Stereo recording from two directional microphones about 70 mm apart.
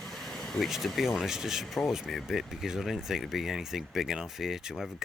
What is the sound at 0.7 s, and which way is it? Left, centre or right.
Speech, centre.